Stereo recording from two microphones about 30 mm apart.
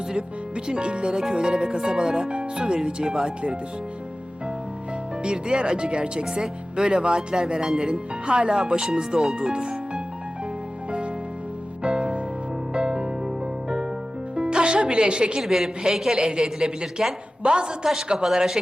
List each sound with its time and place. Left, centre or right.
0.2 s speech: right
5.2 s speech: right
11.8 s music: right
15.4 s a woman's voice: centre
16.1 s a woman's voice: right
17.4 s speech: right
18.1 s a woman's voice: centre